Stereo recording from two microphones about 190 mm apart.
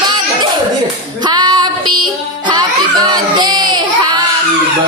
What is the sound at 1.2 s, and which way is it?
Female singing, 20° right (ahead or behind).